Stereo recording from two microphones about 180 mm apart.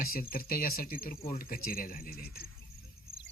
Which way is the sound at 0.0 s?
55° left (ahead or behind).